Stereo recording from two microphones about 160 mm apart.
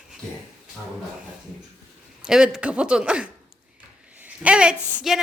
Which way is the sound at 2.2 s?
5° right (ahead or behind).